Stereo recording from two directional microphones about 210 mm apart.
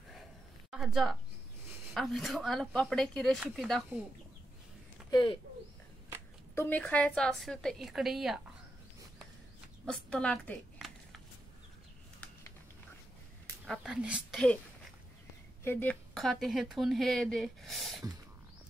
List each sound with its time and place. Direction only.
0.7 s a sound: centre (ahead or behind)
2.0 s speech: centre (ahead or behind)
5.1 s speech: 25° left (ahead or behind)
6.5 s speech: 10° left (ahead or behind)
9.8 s a sound: 5° left (ahead or behind)
13.7 s speech: 5° right (ahead or behind)
15.6 s speech: 10° left (ahead or behind)